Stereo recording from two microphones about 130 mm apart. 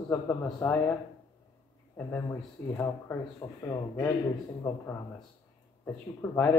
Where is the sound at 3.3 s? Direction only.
30° left (ahead or behind).